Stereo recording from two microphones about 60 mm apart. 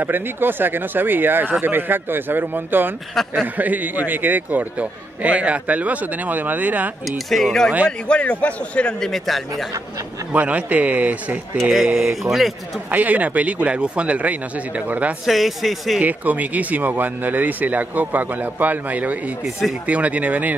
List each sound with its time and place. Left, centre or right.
0.0 s speech: right
3.2 s speech: centre
3.5 s speech: right
7.1 s speech: centre
8.1 s a man's voice: left
9.0 s speech: centre
10.3 s speech: right
12.0 s speech: centre
12.9 s speech: right
15.2 s speech: centre
16.0 s speech: right